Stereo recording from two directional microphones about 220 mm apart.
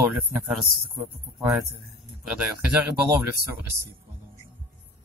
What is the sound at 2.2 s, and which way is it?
Speech, 5° right (ahead or behind).